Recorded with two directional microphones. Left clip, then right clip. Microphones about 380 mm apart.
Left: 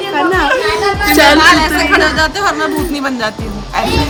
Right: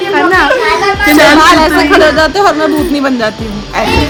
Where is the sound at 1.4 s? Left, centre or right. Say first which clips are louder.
Right 3 dB; centre.